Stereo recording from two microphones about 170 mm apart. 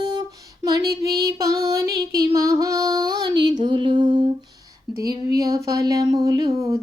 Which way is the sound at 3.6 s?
30° right (ahead or behind).